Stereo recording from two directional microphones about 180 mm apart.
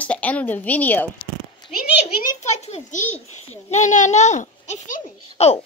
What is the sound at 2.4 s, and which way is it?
A child's voice, 40° left (ahead or behind).